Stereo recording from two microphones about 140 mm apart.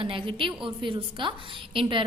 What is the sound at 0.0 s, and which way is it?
A woman's voice, 40° right (ahead or behind).